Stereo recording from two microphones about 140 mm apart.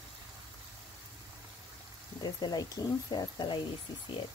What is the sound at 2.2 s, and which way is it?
Speech, 30° left (ahead or behind).